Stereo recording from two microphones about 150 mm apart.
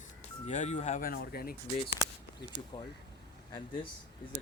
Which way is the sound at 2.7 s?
35° left (ahead or behind).